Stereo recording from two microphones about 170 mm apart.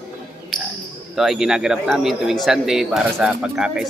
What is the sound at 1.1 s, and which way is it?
A man's voice, centre (ahead or behind).